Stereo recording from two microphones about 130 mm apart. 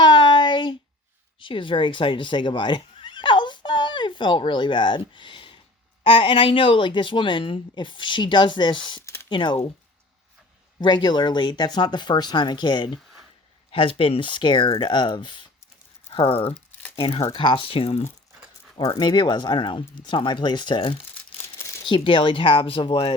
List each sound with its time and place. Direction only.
0.0 s a sound: 35° left (ahead or behind)
1.4 s a woman's voice: 40° left (ahead or behind)
9.0 s a sound: 20° left (ahead or behind)
9.3 s a woman's voice: 35° left (ahead or behind)
10.8 s a woman's voice: 35° left (ahead or behind)
18.8 s a woman's voice: 35° left (ahead or behind)